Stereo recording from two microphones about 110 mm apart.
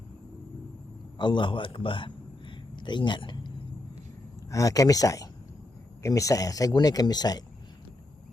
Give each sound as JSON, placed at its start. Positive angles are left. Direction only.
{"t": 1.2, "sound": "a man's voice", "side_deg": 45}
{"t": 4.5, "sound": "speech", "side_deg": 30}